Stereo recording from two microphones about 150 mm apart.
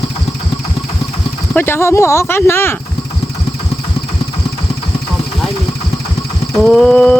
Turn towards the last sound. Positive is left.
turn(degrees=5)  # may be behind; listen again after turning